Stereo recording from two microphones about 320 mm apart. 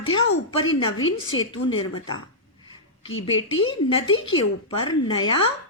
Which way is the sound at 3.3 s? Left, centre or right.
Centre.